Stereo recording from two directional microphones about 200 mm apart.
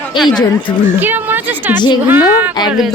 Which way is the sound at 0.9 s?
10° right (ahead or behind).